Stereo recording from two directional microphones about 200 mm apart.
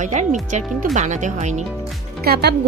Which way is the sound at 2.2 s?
50° right (ahead or behind).